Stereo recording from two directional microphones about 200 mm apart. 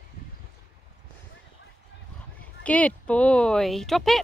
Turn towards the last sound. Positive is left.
turn(degrees=0)  # may be behind; listen again after turning